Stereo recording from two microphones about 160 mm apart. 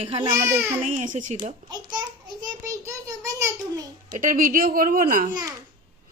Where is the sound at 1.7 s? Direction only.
25° right (ahead or behind).